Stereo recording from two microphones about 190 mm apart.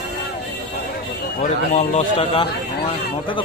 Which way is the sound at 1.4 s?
35° left (ahead or behind).